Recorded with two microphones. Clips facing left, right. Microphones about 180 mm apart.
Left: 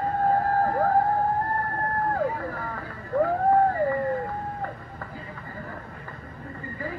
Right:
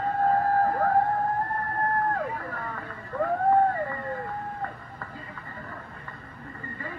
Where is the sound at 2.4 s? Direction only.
30° left (ahead or behind).